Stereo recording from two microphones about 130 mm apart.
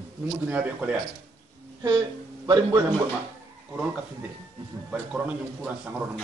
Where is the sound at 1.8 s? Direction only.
35° right (ahead or behind).